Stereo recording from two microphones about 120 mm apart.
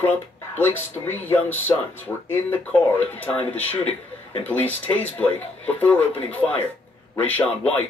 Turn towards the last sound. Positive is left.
turn(degrees=15)  # may be behind; listen again after turning